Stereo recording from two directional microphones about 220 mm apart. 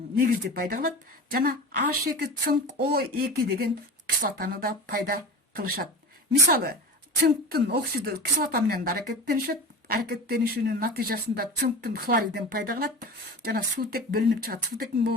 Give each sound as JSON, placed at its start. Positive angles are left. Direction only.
{"t": 0.2, "sound": "a woman's voice", "side_deg": -40}
{"t": 7.2, "sound": "a woman's voice", "side_deg": -45}